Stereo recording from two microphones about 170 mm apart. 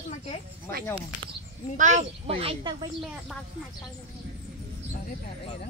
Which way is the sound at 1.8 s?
45° right (ahead or behind).